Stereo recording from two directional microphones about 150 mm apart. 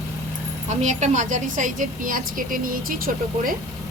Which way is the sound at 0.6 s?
50° right (ahead or behind).